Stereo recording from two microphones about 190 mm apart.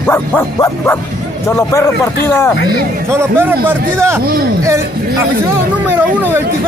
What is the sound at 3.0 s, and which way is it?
Speech, 10° right (ahead or behind).